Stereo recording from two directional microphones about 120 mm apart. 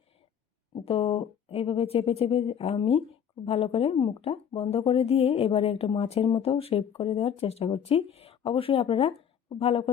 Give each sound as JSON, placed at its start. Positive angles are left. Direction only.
{"t": 0.7, "sound": "speech", "side_deg": 50}
{"t": 3.9, "sound": "speech", "side_deg": 40}
{"t": 4.3, "sound": "speech", "side_deg": 55}